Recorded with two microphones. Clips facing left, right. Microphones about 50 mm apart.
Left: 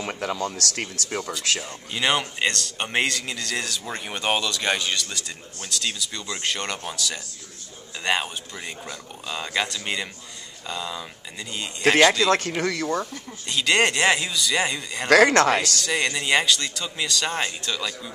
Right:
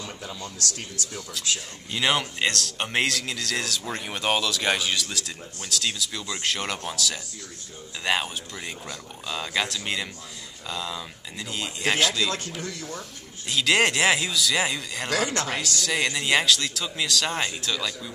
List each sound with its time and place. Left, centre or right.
0.0 s speech: left
1.9 s a man's voice: centre
12.2 s speech: left
12.5 s speech: left
13.5 s a man's voice: centre
15.0 s speech: left
15.8 s a man's voice: centre